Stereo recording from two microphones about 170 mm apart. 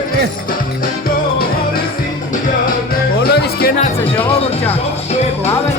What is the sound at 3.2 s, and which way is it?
Music, 65° left (ahead or behind).